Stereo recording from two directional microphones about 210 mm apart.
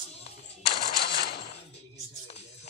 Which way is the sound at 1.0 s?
50° left (ahead or behind).